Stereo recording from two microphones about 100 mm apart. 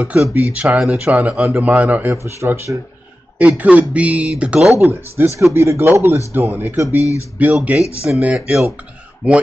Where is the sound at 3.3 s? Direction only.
15° right (ahead or behind).